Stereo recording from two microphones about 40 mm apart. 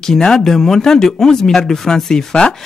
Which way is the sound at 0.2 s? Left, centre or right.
Centre.